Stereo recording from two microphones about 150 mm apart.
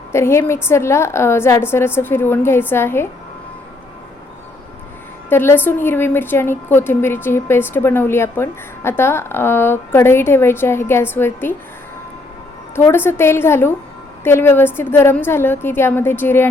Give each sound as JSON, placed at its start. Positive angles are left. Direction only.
{"t": 0.1, "sound": "a woman's voice", "side_deg": 20}
{"t": 5.3, "sound": "a woman's voice", "side_deg": 15}
{"t": 12.7, "sound": "a woman's voice", "side_deg": 15}